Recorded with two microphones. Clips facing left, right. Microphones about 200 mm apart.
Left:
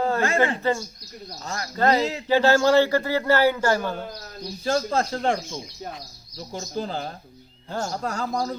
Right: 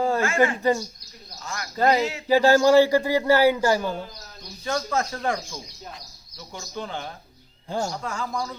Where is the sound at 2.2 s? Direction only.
10° right (ahead or behind).